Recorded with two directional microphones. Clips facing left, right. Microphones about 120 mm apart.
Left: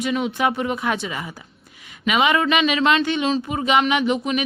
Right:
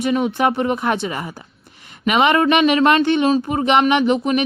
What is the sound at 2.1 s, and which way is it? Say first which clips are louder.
Speech: right 4 dB; 45° right (ahead or behind).